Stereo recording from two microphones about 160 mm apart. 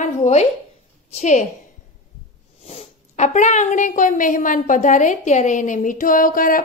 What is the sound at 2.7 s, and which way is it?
A woman's voice, 45° left (ahead or behind).